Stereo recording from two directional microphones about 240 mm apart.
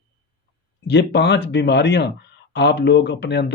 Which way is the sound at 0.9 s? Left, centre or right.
Left.